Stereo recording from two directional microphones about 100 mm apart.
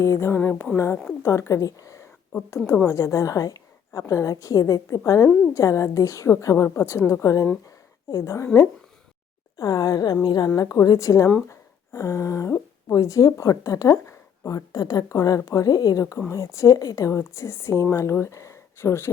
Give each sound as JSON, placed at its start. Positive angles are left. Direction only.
{"t": 0.0, "sound": "a woman's voice", "side_deg": 30}
{"t": 9.6, "sound": "a woman's voice", "side_deg": 40}